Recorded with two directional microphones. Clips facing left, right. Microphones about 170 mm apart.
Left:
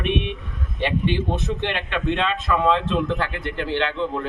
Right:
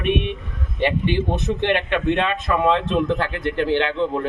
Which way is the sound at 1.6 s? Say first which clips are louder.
Right 6 dB; 50° right (ahead or behind).